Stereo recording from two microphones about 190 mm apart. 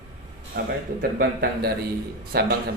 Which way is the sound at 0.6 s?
55° right (ahead or behind).